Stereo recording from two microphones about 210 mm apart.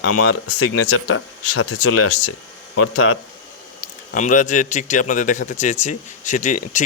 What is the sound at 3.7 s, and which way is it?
Speech, 40° left (ahead or behind).